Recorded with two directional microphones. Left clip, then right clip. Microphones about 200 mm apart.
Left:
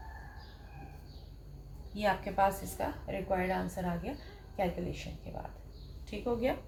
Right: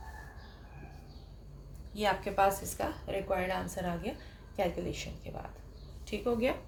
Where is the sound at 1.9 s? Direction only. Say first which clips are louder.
Right 1 dB; 45° right (ahead or behind).